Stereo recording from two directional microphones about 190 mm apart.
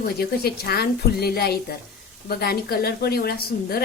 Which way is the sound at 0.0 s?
55° left (ahead or behind).